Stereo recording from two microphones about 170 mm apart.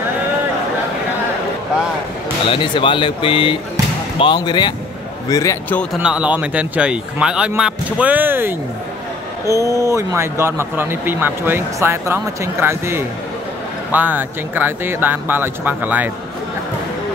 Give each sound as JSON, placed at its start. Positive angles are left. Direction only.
{"t": 2.5, "sound": "speech", "side_deg": 30}
{"t": 5.9, "sound": "speech", "side_deg": -5}